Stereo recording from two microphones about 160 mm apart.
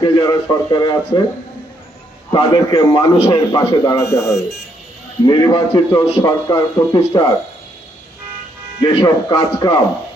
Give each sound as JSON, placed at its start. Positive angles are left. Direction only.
{"t": 0.0, "sound": "a man's voice", "side_deg": 30}
{"t": 2.3, "sound": "a man's voice", "side_deg": 30}
{"t": 8.8, "sound": "a man's voice", "side_deg": 30}